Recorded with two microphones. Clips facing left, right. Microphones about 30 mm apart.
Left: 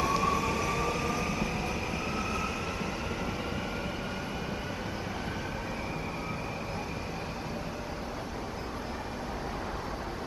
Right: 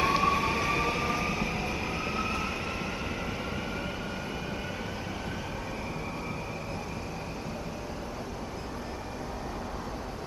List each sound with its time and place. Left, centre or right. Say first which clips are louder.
0.0 s train: right 3 dB; right; by 2.9 s centre